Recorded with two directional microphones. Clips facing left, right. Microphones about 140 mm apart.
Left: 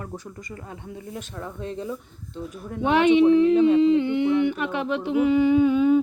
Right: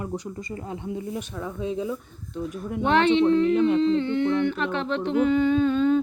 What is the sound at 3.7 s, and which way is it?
Humming, 15° left (ahead or behind).